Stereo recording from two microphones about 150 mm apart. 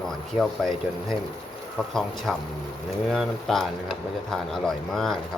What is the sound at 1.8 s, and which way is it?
Speech, centre (ahead or behind).